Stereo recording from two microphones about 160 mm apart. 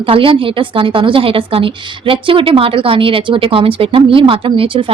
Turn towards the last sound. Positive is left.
turn(degrees=-30)  # may be behind; listen again after turning